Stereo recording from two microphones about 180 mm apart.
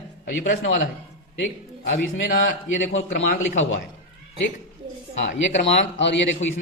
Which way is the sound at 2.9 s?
90° left.